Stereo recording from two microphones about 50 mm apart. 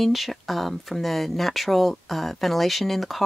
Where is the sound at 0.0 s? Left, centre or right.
Centre.